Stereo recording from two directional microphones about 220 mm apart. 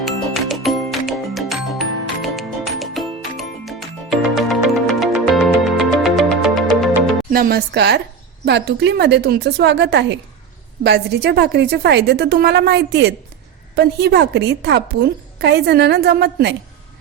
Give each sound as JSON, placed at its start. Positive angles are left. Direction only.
{"t": 0.0, "sound": "music", "side_deg": 0}
{"t": 7.3, "sound": "a woman's voice", "side_deg": -40}